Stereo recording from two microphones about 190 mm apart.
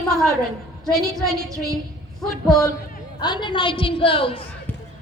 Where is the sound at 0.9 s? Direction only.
Centre (ahead or behind).